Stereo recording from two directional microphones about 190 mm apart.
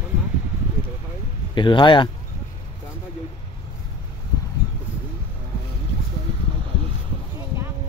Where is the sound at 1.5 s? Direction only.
25° left (ahead or behind).